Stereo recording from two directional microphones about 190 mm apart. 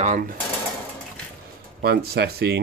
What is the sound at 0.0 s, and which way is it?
Speech, 40° right (ahead or behind).